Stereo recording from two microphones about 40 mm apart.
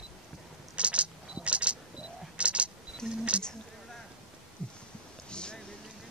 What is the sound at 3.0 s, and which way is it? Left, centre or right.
Speech, centre.